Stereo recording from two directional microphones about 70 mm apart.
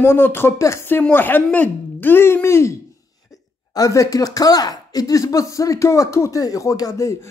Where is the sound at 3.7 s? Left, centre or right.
Left.